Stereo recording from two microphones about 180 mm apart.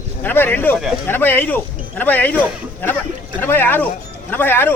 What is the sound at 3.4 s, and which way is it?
Speech, 10° left (ahead or behind).